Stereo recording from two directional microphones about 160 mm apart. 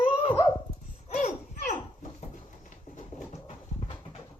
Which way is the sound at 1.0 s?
45° left (ahead or behind).